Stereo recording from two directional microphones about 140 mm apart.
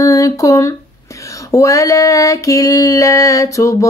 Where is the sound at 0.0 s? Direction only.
25° left (ahead or behind).